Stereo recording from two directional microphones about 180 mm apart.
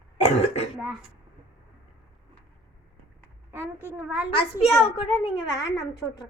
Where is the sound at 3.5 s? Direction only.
10° right (ahead or behind).